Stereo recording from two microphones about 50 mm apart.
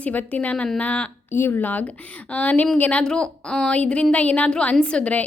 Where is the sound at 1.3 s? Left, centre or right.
Left.